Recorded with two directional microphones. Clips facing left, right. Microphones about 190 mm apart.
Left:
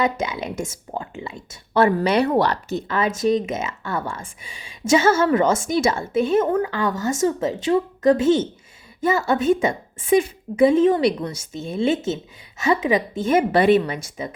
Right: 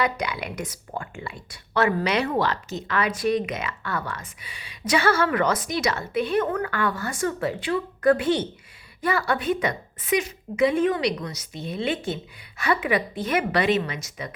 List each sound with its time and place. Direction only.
0.0 s speech: 25° left (ahead or behind)
2.9 s a woman's voice: 25° left (ahead or behind)
11.5 s a woman's voice: 45° left (ahead or behind)
12.5 s speech: 20° left (ahead or behind)